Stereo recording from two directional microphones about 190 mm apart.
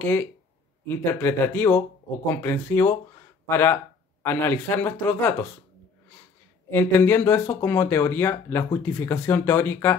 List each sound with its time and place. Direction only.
0.0 s speech: 10° left (ahead or behind)
6.7 s speech: 10° left (ahead or behind)